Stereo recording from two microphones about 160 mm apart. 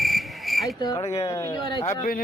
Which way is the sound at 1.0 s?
40° left (ahead or behind).